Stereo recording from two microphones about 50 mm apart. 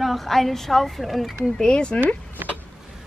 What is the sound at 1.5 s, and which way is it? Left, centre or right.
Speech, centre.